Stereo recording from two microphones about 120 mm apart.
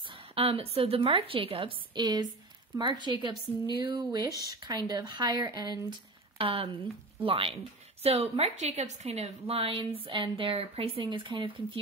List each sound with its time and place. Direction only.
0.1 s a woman's voice: 50° right (ahead or behind)